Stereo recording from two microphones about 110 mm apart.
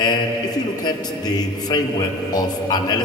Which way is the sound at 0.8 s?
40° left (ahead or behind).